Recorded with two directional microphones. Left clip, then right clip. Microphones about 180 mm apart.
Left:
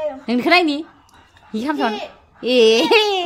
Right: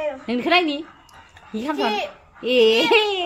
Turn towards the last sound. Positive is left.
turn(degrees=20)  # may be behind; listen again after turning